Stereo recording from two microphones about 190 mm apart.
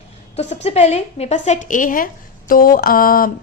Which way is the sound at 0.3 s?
35° left (ahead or behind).